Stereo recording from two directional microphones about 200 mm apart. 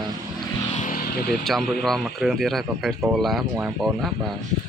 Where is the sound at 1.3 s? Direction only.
Centre (ahead or behind).